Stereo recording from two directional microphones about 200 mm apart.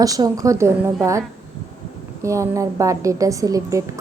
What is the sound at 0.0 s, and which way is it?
Speech, 15° right (ahead or behind).